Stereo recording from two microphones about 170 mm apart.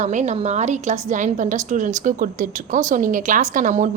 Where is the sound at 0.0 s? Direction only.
45° right (ahead or behind).